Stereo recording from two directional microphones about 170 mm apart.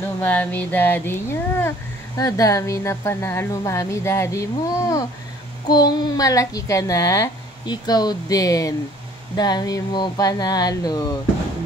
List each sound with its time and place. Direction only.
0.2 s a child's voice: 10° left (ahead or behind)